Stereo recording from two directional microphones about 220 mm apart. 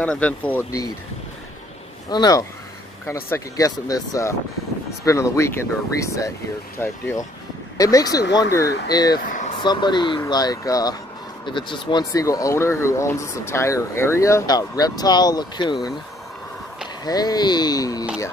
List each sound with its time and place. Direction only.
0.0 s speech: 5° left (ahead or behind)
2.0 s speech: 20° left (ahead or behind)
9.2 s vehicle: 35° left (ahead or behind)
9.6 s speech: 20° left (ahead or behind)
17.0 s speech: 20° left (ahead or behind)